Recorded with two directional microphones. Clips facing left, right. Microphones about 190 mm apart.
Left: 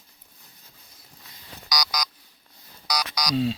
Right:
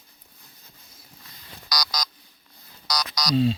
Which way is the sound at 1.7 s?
10° left (ahead or behind).